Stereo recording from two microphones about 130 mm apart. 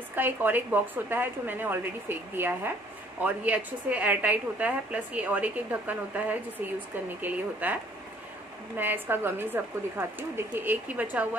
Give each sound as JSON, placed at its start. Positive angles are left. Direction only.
{"t": 0.1, "sound": "a woman's voice", "side_deg": -15}